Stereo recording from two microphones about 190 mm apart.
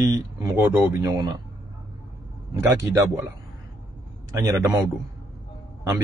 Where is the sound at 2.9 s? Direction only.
10° right (ahead or behind).